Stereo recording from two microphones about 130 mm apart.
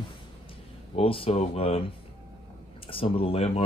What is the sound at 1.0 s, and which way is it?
Speech, 45° left (ahead or behind).